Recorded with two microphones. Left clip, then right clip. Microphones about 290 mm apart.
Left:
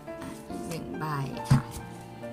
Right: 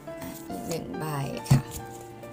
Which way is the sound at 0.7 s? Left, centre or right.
Centre.